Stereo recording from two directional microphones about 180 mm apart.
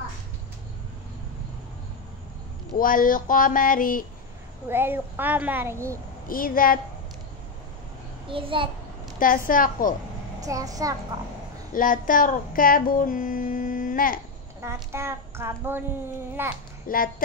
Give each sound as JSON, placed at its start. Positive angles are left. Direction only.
{"t": 2.8, "sound": "a sound", "side_deg": 50}
{"t": 4.6, "sound": "a child's voice", "side_deg": -10}
{"t": 6.2, "sound": "a sound", "side_deg": 50}
{"t": 8.3, "sound": "a child's voice", "side_deg": -30}
{"t": 9.2, "sound": "a sound", "side_deg": 50}
{"t": 10.4, "sound": "a child's voice", "side_deg": -20}
{"t": 11.7, "sound": "child singing", "side_deg": 50}
{"t": 14.6, "sound": "a child's voice", "side_deg": -15}
{"t": 16.8, "sound": "speech", "side_deg": 50}